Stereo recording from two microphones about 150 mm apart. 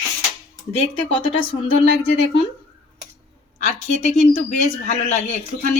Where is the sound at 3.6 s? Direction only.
50° left (ahead or behind).